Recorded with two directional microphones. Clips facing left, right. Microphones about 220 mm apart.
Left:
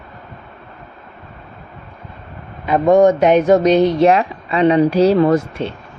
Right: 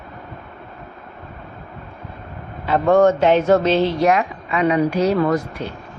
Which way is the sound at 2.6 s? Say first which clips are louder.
Left 3 dB; 15° left (ahead or behind).